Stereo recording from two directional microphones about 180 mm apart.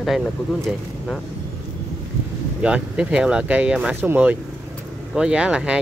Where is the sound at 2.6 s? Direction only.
5° right (ahead or behind).